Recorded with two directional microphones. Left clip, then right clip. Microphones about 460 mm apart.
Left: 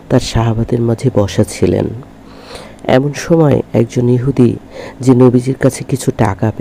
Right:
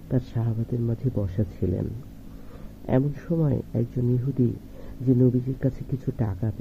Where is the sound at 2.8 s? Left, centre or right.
Centre.